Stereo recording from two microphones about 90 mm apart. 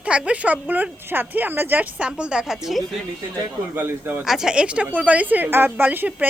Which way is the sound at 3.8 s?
20° right (ahead or behind).